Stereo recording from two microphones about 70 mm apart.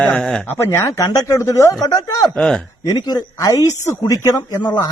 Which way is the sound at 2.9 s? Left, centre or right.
Left.